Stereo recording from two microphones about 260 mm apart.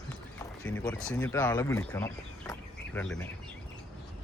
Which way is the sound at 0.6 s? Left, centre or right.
Centre.